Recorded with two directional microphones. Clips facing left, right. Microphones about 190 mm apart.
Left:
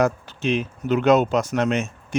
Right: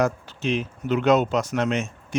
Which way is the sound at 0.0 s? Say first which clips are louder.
Left 2 dB; 60° left (ahead or behind).